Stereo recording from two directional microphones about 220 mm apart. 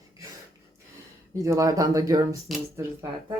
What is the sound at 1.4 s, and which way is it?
Speech, 15° right (ahead or behind).